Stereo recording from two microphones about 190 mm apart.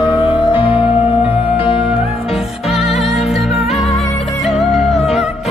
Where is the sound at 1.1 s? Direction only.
10° right (ahead or behind).